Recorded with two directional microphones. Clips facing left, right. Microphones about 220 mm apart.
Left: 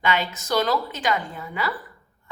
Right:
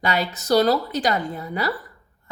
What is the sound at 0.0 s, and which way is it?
A woman's voice, 40° right (ahead or behind).